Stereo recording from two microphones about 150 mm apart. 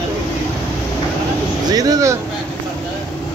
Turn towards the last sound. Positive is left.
turn(degrees=-25)  # may be behind; listen again after turning